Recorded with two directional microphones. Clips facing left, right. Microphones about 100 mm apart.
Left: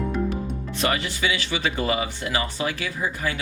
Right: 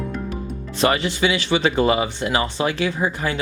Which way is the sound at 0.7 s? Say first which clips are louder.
Right 6 dB; 30° right (ahead or behind).